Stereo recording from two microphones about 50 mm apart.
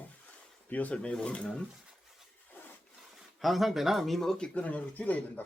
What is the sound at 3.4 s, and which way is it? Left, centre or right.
Speech, centre.